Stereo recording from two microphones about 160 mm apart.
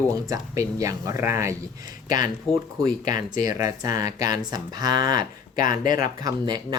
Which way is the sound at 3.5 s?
25° right (ahead or behind).